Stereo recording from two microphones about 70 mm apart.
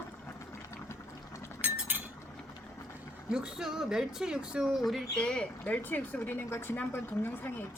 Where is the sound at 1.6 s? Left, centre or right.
Right.